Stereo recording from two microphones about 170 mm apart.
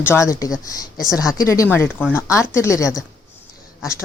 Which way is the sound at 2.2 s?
15° left (ahead or behind).